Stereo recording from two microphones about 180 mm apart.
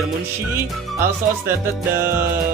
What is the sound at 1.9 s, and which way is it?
Speech, 15° right (ahead or behind).